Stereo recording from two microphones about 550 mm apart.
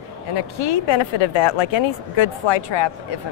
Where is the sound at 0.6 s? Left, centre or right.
Left.